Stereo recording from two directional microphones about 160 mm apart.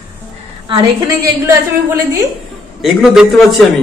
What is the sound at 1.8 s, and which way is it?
Speech, 20° right (ahead or behind).